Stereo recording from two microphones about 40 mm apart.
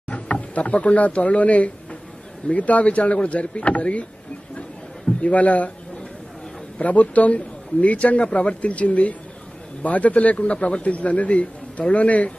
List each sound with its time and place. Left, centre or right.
0.1 s a man's voice: left
5.2 s a man's voice: left
6.8 s a man's voice: left